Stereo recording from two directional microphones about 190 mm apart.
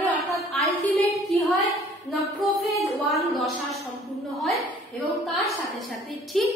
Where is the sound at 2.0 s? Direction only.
Centre (ahead or behind).